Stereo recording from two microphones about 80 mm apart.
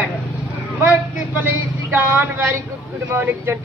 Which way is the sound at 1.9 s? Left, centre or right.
Right.